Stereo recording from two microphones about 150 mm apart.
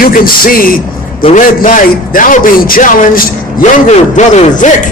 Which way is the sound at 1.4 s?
60° left (ahead or behind).